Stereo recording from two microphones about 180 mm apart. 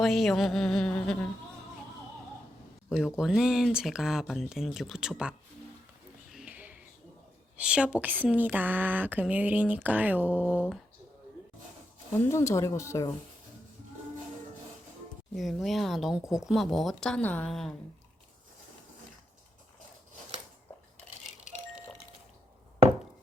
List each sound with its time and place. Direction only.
0.0 s speech: centre (ahead or behind)
2.9 s speech: centre (ahead or behind)
6.3 s a sound: 5° right (ahead or behind)
7.5 s a woman's voice: 5° right (ahead or behind)
12.1 s speech: 15° left (ahead or behind)
15.4 s speech: centre (ahead or behind)